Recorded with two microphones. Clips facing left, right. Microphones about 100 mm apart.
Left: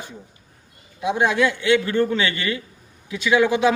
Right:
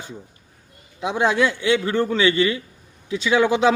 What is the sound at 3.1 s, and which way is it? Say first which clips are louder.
Speech: even; 30° right (ahead or behind).